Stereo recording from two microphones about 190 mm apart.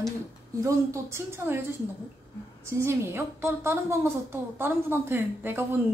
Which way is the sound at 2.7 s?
15° right (ahead or behind).